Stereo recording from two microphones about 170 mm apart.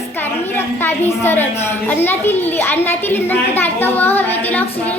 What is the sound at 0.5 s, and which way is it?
A woman's voice, 10° left (ahead or behind).